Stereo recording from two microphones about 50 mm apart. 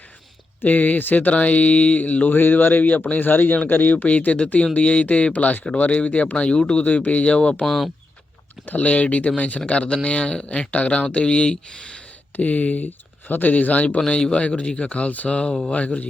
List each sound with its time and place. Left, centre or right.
0.6 s speech: left
7.6 s speech: centre
8.6 s speech: left
12.4 s speech: left
14.1 s speech: left